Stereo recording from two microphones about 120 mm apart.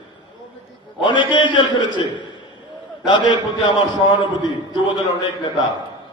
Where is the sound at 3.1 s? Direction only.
40° left (ahead or behind).